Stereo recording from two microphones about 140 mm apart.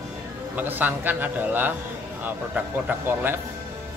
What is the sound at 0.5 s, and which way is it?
Speech, 15° right (ahead or behind).